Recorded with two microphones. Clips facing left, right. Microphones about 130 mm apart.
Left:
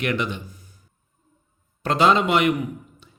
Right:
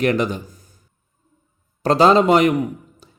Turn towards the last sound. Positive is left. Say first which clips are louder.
# right 6 dB
turn(degrees=-40)  # may be behind; listen again after turning